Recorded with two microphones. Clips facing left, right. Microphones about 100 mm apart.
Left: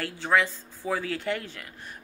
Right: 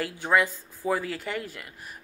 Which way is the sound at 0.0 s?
15° right (ahead or behind).